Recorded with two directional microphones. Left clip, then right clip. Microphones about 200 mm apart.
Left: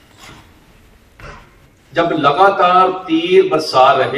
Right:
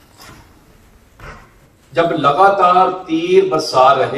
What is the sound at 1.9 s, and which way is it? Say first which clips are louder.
A man's voice: even; 20° right (ahead or behind).